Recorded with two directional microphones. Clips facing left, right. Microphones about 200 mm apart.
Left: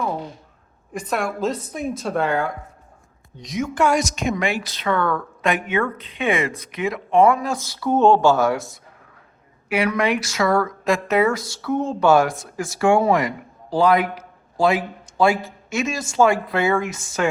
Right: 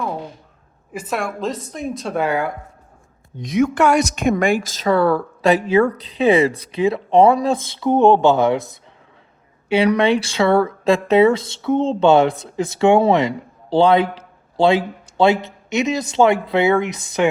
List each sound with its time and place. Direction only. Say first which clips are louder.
0.9 s a woman's voice: even; centre (ahead or behind)
3.3 s speech: right 6 dB; 55° right (ahead or behind); by 8.8 s 20° right (ahead or behind)
9.6 s speech: right 5 dB; 30° right (ahead or behind)